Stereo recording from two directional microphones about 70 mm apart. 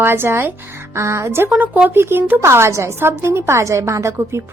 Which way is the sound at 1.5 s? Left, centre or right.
Right.